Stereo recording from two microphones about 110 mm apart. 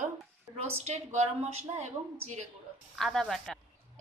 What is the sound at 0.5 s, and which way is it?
A woman's voice, 70° right (ahead or behind).